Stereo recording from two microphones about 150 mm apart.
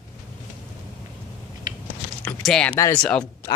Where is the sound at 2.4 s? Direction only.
5° left (ahead or behind).